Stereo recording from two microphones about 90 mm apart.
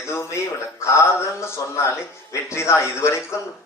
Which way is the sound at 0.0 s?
30° left (ahead or behind).